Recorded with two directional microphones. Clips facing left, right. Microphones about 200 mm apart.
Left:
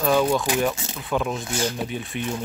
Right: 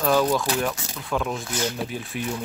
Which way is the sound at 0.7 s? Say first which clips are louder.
Left 2 dB; 25° left (ahead or behind).